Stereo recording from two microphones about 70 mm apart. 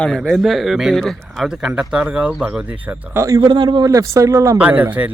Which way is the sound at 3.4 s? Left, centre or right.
Right.